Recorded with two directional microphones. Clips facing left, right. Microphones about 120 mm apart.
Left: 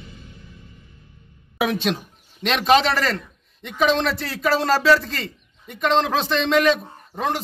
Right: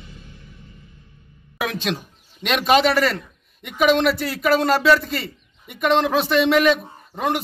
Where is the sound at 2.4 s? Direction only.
5° right (ahead or behind).